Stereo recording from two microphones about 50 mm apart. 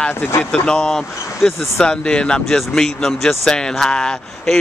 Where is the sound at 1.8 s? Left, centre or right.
Centre.